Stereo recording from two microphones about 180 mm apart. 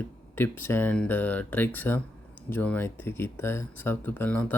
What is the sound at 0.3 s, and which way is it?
Speech, 10° left (ahead or behind).